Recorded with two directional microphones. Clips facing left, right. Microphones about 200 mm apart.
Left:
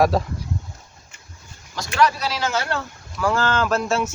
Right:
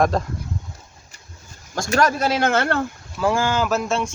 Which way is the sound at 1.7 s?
45° right (ahead or behind).